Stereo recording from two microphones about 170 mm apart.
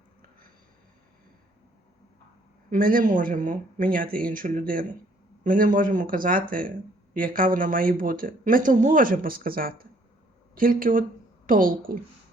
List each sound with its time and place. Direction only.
2.6 s speech: 55° right (ahead or behind)